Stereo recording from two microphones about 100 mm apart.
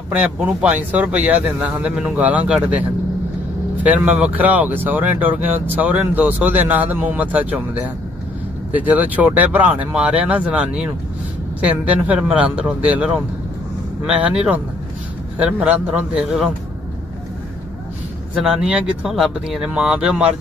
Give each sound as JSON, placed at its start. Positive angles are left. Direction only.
{"t": 0.1, "sound": "speech", "side_deg": -10}
{"t": 3.8, "sound": "speech", "side_deg": -15}
{"t": 18.3, "sound": "speech", "side_deg": -5}